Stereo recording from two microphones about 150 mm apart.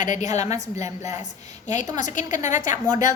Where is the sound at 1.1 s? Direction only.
55° left (ahead or behind).